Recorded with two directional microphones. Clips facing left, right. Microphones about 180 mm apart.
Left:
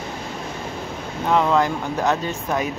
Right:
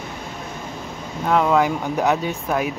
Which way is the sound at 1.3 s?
5° right (ahead or behind).